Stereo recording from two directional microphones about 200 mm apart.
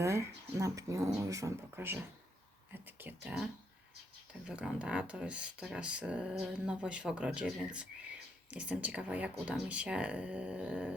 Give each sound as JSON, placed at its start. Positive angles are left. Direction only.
{"t": 0.0, "sound": "speech", "side_deg": -15}